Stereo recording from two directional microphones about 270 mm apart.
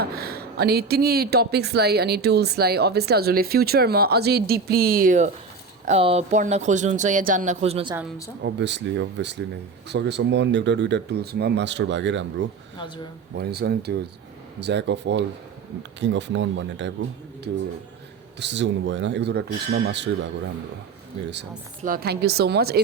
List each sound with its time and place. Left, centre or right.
0.0 s a woman's voice: right
8.4 s a woman's voice: right
13.3 s a woman's voice: right
18.3 s a woman's voice: right
21.8 s a woman's voice: right